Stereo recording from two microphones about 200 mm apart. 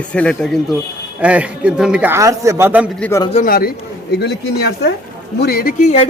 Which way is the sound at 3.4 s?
45° left (ahead or behind).